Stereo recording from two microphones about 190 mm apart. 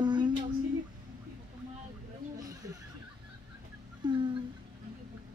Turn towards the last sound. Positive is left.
turn(degrees=-25)  # may be behind; listen again after turning